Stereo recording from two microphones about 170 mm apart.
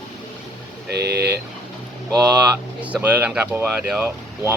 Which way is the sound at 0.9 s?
70° right (ahead or behind).